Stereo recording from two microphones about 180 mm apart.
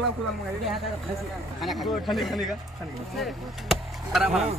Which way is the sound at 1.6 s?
Centre (ahead or behind).